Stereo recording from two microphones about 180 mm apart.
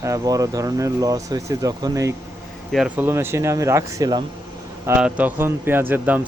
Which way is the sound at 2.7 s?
5° right (ahead or behind).